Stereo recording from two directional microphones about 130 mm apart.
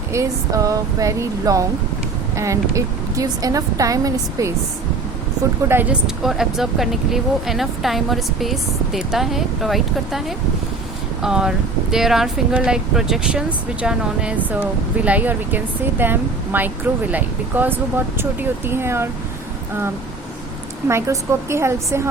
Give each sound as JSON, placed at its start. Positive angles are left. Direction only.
{"t": 0.1, "sound": "a woman's voice", "side_deg": -25}
{"t": 5.6, "sound": "speech", "side_deg": -15}
{"t": 20.8, "sound": "a woman's voice", "side_deg": -20}